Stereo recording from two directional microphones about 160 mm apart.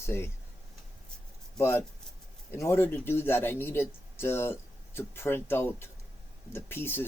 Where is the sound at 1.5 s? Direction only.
15° left (ahead or behind).